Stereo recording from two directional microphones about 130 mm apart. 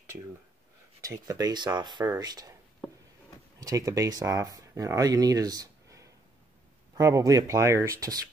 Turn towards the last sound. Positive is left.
turn(degrees=-25)  # may be behind; listen again after turning